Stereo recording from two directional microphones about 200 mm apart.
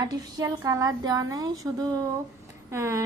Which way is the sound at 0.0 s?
20° right (ahead or behind).